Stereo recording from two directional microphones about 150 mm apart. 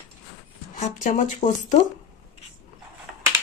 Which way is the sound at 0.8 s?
60° left (ahead or behind).